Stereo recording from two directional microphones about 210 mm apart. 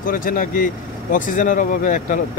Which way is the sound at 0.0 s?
40° left (ahead or behind).